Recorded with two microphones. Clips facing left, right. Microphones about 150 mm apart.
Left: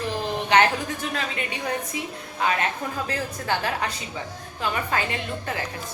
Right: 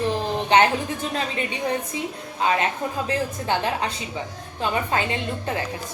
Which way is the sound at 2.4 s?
25° right (ahead or behind).